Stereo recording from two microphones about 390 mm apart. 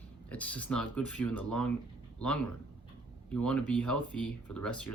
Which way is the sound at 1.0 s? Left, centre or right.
Left.